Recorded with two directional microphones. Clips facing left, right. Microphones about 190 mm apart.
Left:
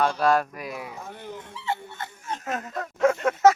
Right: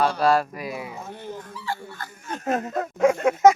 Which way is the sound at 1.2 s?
20° left (ahead or behind).